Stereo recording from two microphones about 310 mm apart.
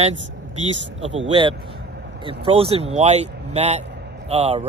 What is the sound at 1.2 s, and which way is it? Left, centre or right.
A man's voice, centre.